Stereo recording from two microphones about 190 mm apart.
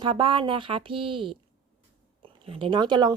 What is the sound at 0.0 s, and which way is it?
A woman's voice, 25° right (ahead or behind).